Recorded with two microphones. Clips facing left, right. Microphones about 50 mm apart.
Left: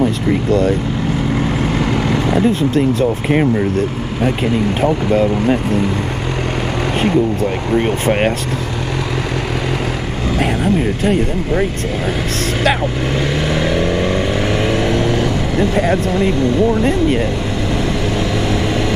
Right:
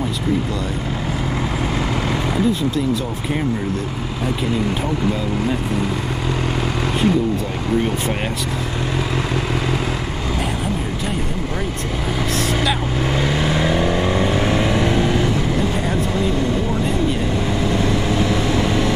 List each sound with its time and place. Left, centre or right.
0.5 s speech: left
2.3 s speech: left
4.8 s speech: left
7.7 s speech: left
13.7 s vehicle: centre
15.7 s speech: left